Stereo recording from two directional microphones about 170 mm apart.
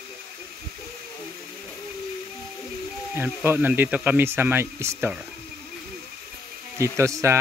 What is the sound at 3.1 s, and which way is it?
Speech, 15° right (ahead or behind).